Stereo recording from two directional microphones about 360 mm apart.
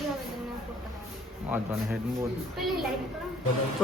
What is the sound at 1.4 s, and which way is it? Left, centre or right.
Speech, centre.